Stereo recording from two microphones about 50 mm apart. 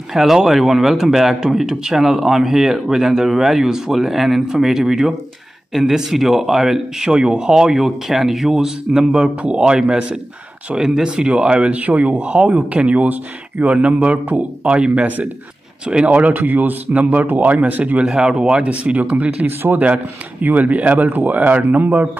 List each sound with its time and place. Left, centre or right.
0.1 s speech: centre; by 15.0 s right
16.1 s a man's voice: right
18.0 s a man's voice: centre; by 22.1 s right